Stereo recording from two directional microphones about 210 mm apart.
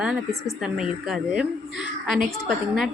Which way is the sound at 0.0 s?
5° right (ahead or behind).